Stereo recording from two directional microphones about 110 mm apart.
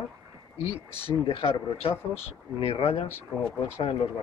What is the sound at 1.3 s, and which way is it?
A man's voice, 55° left (ahead or behind).